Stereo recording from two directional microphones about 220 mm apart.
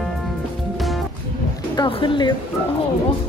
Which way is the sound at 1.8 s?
20° left (ahead or behind).